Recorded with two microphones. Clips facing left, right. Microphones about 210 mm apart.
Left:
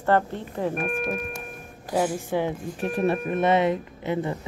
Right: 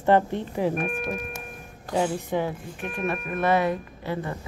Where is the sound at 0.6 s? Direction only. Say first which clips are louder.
Left 3 dB; 5° right (ahead or behind).